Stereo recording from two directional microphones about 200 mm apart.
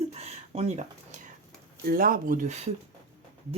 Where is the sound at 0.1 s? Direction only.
30° right (ahead or behind).